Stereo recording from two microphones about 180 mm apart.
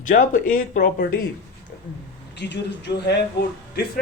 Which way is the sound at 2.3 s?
70° left (ahead or behind).